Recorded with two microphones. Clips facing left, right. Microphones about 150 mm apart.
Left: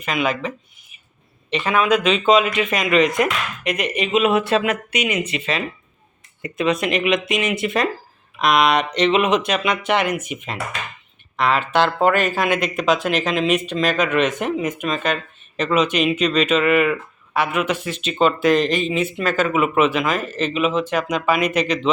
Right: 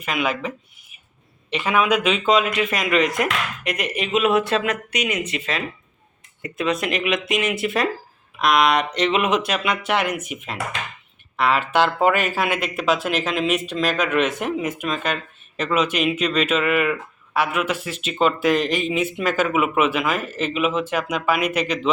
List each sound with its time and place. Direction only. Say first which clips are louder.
0.0 s speech: left 2 dB; 5° right (ahead or behind)